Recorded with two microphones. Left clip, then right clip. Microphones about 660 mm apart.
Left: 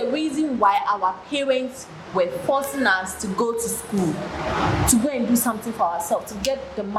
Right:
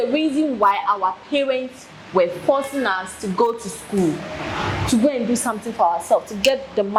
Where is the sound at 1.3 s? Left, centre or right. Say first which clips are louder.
Right 2 dB; right.